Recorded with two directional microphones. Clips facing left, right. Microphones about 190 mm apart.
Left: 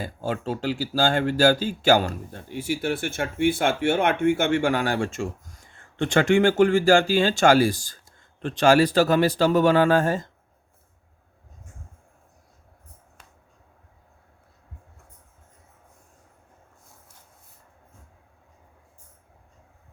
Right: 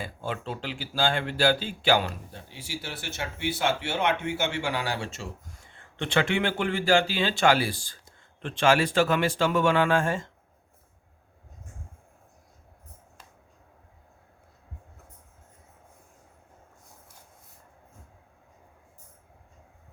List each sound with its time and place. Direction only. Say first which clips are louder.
0.0 s speech: left 5 dB; 40° left (ahead or behind)